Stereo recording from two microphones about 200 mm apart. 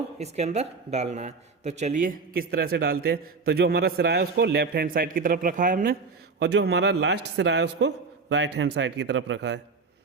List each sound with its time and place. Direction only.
0.2 s speech: 35° right (ahead or behind)
6.4 s a man's voice: 60° right (ahead or behind)